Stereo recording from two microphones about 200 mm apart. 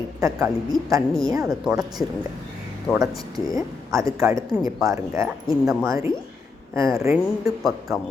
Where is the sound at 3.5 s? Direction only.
15° right (ahead or behind).